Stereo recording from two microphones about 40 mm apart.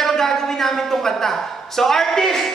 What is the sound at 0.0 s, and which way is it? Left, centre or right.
A woman's voice, centre.